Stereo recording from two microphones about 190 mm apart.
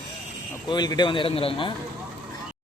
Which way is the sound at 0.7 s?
20° left (ahead or behind).